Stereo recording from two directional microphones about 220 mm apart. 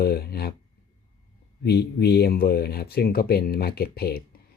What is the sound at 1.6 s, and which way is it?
Speech, 45° left (ahead or behind).